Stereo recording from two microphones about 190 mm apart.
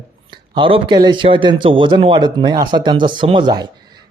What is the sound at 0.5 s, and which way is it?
A man's voice, 25° right (ahead or behind).